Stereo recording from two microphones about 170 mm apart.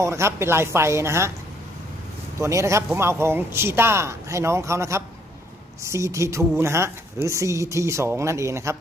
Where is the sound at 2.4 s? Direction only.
15° right (ahead or behind).